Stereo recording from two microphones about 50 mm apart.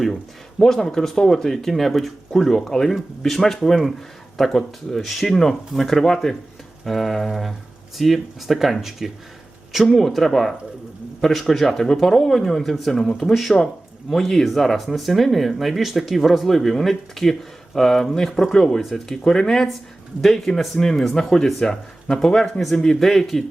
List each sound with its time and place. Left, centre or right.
0.6 s speech: centre